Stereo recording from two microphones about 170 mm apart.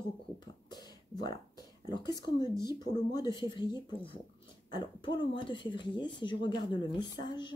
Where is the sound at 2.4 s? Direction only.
15° right (ahead or behind).